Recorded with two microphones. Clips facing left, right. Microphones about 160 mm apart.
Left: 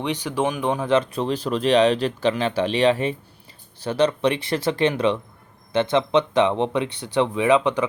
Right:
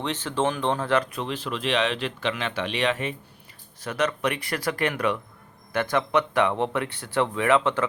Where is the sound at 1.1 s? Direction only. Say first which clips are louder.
Left 7 dB; 35° left (ahead or behind).